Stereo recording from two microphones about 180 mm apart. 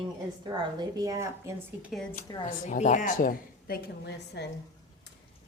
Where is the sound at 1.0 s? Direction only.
15° right (ahead or behind).